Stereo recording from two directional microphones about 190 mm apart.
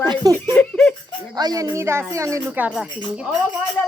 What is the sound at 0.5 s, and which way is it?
Speech, 5° left (ahead or behind).